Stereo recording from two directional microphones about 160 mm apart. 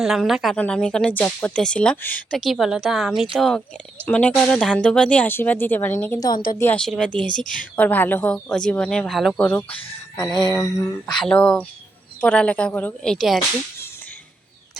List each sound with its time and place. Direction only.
0.0 s a woman's voice: centre (ahead or behind); by 6.4 s 25° left (ahead or behind)
6.6 s speech: 10° left (ahead or behind)
7.3 s a woman's voice: 55° left (ahead or behind)
7.8 s a woman's voice: 10° left (ahead or behind)
10.5 s a sound: 20° left (ahead or behind)
11.2 s speech: 5° left (ahead or behind)